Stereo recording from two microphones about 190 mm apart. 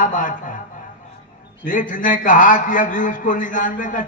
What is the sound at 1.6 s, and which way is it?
A man's voice, 45° left (ahead or behind).